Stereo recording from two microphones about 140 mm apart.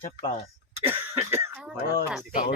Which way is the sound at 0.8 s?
20° right (ahead or behind).